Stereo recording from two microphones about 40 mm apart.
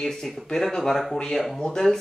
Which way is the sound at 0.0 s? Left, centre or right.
Centre.